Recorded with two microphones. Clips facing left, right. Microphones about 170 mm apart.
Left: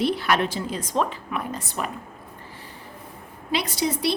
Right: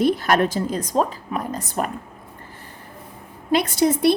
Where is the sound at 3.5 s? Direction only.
50° right (ahead or behind).